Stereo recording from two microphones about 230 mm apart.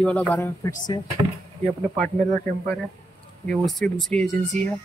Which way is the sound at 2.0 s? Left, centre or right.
Right.